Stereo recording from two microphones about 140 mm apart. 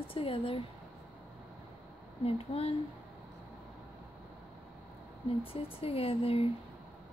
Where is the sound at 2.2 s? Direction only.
45° left (ahead or behind).